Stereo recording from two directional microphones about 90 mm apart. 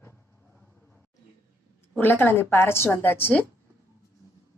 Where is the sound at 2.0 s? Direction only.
20° left (ahead or behind).